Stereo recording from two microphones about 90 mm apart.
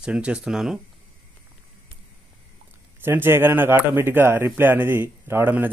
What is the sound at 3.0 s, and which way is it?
Speech, 25° right (ahead or behind).